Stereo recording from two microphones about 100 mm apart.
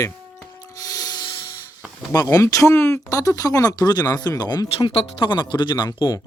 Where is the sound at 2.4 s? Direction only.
30° left (ahead or behind); by 6.2 s 50° left (ahead or behind).